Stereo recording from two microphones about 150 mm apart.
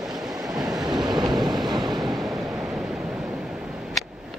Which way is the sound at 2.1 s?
Centre (ahead or behind).